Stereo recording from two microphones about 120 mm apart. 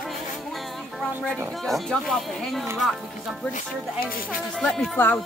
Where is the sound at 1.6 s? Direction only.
Centre (ahead or behind).